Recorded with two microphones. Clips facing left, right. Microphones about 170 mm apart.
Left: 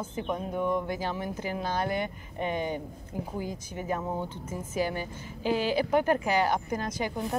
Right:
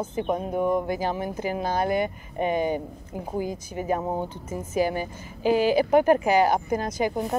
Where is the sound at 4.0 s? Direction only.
35° right (ahead or behind).